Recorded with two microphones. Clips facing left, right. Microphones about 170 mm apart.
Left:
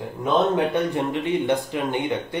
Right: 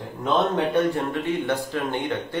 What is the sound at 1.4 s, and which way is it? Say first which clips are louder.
Speech: left 2 dB; 15° left (ahead or behind).